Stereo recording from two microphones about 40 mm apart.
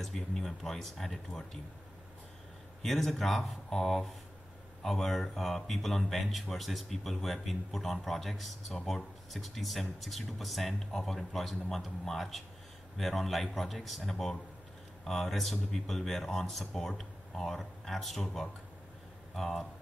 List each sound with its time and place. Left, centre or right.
0.0 s speech: centre
2.8 s speech: centre